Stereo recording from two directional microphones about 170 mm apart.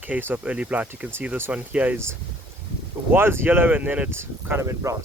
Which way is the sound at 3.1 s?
15° right (ahead or behind).